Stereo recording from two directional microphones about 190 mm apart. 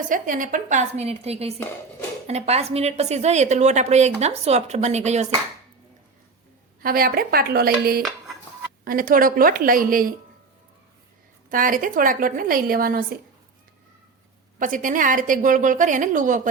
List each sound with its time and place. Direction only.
0.1 s a woman's voice: 45° right (ahead or behind)
6.8 s a woman's voice: 50° right (ahead or behind)
11.4 s a woman's voice: 45° right (ahead or behind)
14.6 s a woman's voice: 45° right (ahead or behind)